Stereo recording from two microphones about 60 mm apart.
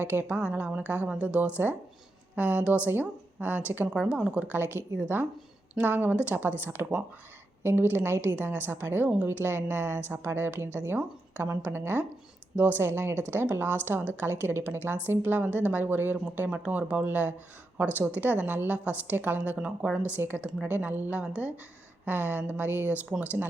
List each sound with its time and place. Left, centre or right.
0.0 s a woman's voice: right
3.8 s speech: centre
5.1 s a woman's voice: right
12.8 s a woman's voice: right
22.0 s a woman's voice: right